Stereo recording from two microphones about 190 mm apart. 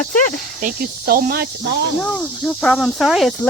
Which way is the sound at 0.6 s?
50° right (ahead or behind).